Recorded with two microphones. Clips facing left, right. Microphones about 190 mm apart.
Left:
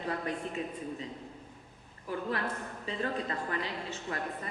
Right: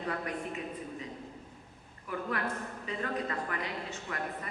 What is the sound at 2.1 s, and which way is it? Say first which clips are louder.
A woman's voice: left 1 dB; 30° left (ahead or behind).